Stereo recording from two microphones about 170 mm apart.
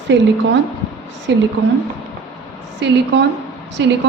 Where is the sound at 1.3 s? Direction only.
90° right.